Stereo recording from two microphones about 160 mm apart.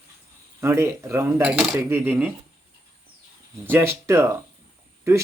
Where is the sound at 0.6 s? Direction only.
15° right (ahead or behind).